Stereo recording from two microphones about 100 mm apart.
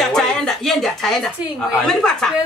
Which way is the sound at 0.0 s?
5° left (ahead or behind).